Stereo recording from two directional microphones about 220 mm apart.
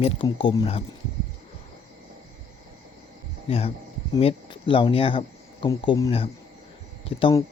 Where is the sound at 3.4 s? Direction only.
25° left (ahead or behind).